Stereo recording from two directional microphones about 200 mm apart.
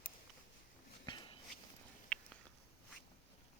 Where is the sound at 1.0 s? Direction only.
25° left (ahead or behind).